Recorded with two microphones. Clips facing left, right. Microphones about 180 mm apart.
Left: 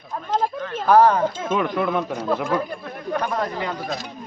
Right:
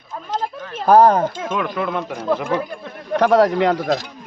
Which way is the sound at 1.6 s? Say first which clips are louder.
Left 1 dB; centre (ahead or behind).